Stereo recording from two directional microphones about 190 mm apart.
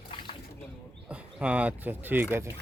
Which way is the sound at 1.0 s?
5° right (ahead or behind).